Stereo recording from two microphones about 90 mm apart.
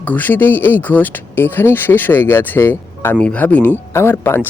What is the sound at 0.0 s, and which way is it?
Speech, 20° left (ahead or behind).